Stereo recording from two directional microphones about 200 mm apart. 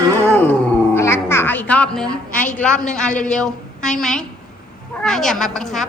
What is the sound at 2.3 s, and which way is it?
Speech, 40° left (ahead or behind).